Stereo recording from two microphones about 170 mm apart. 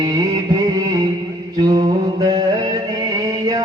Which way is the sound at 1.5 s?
20° right (ahead or behind).